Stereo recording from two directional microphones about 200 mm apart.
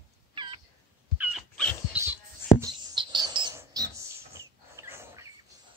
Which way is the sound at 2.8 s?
20° right (ahead or behind).